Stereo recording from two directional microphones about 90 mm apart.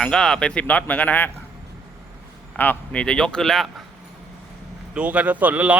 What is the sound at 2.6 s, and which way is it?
Speech, 15° left (ahead or behind).